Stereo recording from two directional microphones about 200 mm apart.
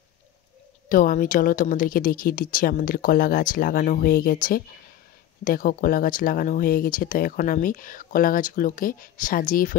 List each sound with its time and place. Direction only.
0.8 s speech: 40° left (ahead or behind)